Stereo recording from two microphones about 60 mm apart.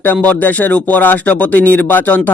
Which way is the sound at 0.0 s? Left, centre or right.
Left.